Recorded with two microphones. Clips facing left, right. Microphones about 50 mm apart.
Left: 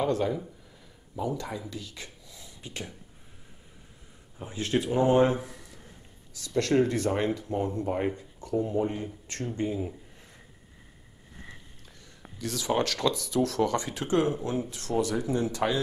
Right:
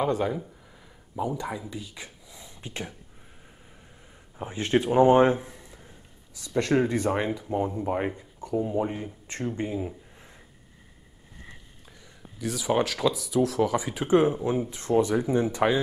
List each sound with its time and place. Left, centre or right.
0.0 s speech: centre
4.4 s speech: right
12.4 s speech: centre